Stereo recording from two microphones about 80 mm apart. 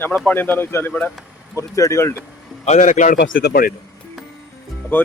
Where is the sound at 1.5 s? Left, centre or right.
Left.